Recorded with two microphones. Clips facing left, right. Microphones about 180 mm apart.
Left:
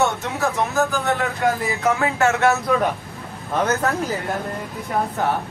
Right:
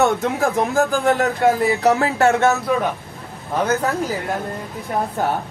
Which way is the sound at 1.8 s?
40° right (ahead or behind).